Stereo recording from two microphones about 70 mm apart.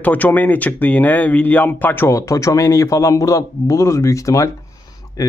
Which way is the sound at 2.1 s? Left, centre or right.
Left.